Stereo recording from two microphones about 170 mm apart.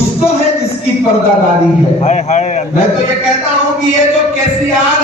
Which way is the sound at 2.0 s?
40° left (ahead or behind).